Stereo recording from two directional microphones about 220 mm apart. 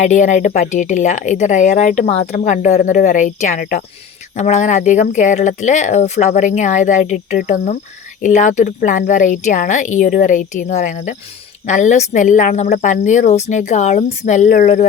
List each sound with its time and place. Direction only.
0.0 s speech: 35° left (ahead or behind)